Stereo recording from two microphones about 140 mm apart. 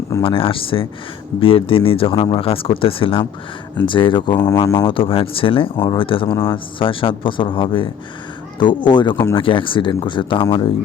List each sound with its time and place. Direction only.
0.2 s speech: 40° left (ahead or behind)
4.9 s speech: 40° left (ahead or behind)
5.7 s speech: 30° left (ahead or behind)
6.3 s speech: 15° left (ahead or behind)
6.7 s speech: 40° left (ahead or behind)